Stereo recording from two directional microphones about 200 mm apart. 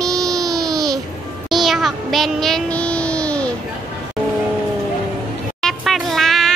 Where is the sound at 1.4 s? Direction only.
Centre (ahead or behind).